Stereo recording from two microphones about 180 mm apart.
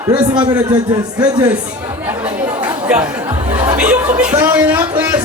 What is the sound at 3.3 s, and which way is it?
Laughter, 40° right (ahead or behind).